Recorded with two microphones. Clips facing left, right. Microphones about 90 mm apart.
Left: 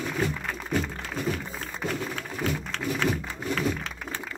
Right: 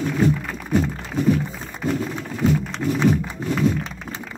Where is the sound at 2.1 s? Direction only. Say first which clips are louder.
Right 8 dB; 20° right (ahead or behind).